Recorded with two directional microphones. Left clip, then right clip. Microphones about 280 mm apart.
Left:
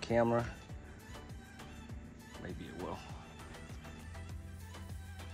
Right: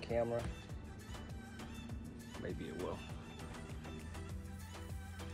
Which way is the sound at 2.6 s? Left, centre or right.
Centre.